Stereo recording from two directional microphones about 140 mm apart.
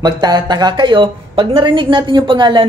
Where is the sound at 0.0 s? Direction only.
30° right (ahead or behind).